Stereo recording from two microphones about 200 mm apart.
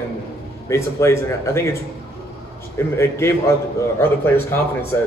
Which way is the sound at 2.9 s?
15° left (ahead or behind).